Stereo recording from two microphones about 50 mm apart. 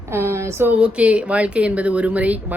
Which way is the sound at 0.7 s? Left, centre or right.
Right.